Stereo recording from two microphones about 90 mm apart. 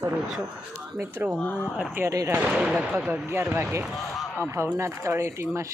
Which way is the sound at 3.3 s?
30° right (ahead or behind).